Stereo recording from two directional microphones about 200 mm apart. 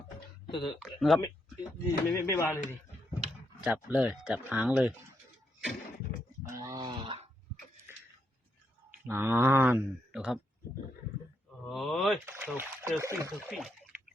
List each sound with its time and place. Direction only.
0.4 s a sound: 25° left (ahead or behind)
0.8 s speech: centre (ahead or behind)
1.9 s speech: 15° left (ahead or behind)
3.6 s speech: 5° right (ahead or behind)
6.5 s wail: 15° right (ahead or behind)
9.0 s speech: 10° right (ahead or behind)
11.6 s a sound: centre (ahead or behind)
12.2 s speech: 10° right (ahead or behind)
13.5 s speech: centre (ahead or behind)